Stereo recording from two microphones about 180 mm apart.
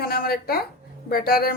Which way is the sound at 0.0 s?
55° left (ahead or behind).